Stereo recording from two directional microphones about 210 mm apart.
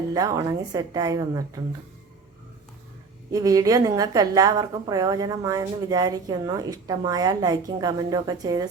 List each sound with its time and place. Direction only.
0.1 s a woman's voice: 15° right (ahead or behind)
3.3 s a woman's voice: 15° right (ahead or behind)